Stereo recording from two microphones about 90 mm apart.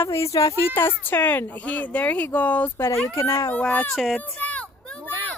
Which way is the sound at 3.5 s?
15° left (ahead or behind).